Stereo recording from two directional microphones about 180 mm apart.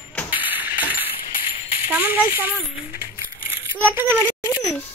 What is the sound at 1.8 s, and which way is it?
Speech, 10° right (ahead or behind).